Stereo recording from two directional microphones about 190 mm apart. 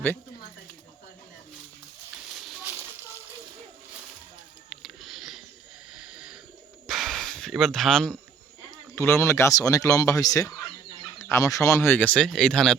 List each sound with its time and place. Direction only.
4.8 s a sound: centre (ahead or behind)
6.8 s gasp: centre (ahead or behind)
9.0 s speech: 15° left (ahead or behind)